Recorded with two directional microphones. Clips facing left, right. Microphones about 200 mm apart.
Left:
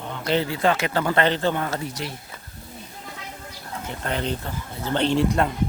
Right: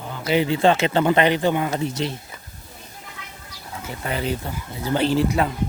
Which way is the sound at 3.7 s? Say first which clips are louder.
Even; 5° right (ahead or behind).